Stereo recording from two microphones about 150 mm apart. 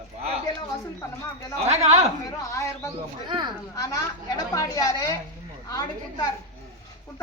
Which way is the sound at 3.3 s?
30° right (ahead or behind).